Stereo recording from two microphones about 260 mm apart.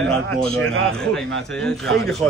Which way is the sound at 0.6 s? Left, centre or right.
Right.